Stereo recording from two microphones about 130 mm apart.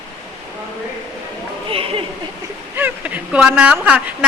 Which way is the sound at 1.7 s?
45° right (ahead or behind).